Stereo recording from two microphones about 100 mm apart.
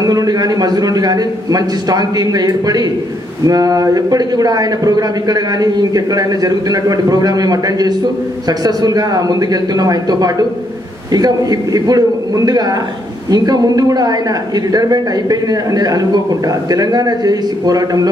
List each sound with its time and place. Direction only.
0.0 s a woman's voice: 40° right (ahead or behind)